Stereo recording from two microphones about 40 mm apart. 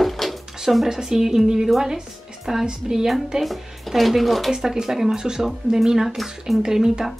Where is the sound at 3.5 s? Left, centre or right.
Centre.